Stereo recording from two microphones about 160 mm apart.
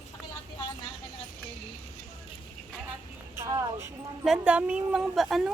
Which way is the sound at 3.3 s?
20° right (ahead or behind).